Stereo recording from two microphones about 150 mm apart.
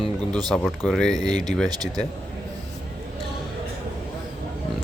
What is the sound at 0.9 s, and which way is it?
Speech, 5° left (ahead or behind).